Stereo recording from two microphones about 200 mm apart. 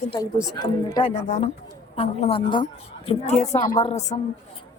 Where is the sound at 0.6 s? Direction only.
20° left (ahead or behind).